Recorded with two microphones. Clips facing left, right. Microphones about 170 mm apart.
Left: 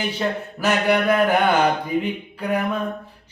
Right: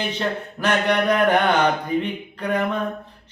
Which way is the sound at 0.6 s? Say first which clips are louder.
Left 1 dB; 5° left (ahead or behind).